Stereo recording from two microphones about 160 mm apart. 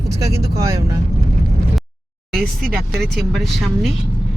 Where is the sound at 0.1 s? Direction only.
20° right (ahead or behind).